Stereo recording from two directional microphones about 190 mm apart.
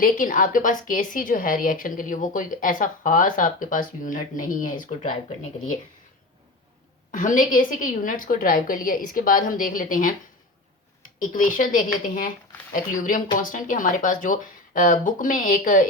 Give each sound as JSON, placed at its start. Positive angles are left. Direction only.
{"t": 0.0, "sound": "a woman's voice", "side_deg": 45}
{"t": 7.1, "sound": "a woman's voice", "side_deg": 45}
{"t": 11.2, "sound": "a woman's voice", "side_deg": 45}